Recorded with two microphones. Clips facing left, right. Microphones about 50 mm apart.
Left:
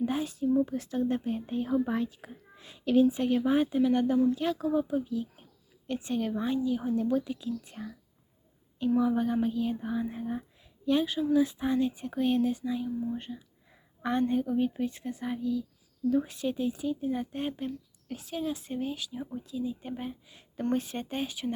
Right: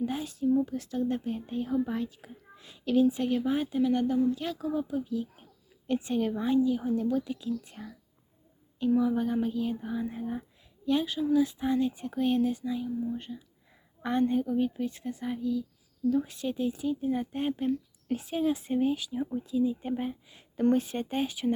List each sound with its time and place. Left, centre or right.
0.0 s a woman's voice: centre
1.6 s a woman's voice: left
14.0 s a woman's voice: centre
14.5 s a woman's voice: centre
16.0 s a woman's voice: centre
16.3 s a woman's voice: centre
17.7 s speech: right; by 21.5 s centre